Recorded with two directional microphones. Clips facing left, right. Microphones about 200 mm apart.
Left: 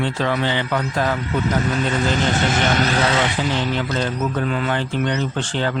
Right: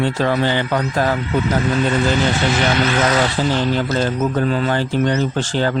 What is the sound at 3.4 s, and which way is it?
Speech, 35° right (ahead or behind).